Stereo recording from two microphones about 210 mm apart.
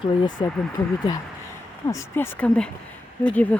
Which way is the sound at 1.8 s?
15° left (ahead or behind).